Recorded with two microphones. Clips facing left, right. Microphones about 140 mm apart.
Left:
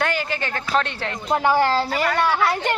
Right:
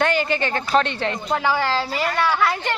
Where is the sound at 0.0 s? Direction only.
Centre (ahead or behind).